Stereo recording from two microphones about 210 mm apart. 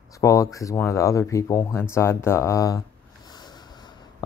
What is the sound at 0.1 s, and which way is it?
Speech, 15° left (ahead or behind).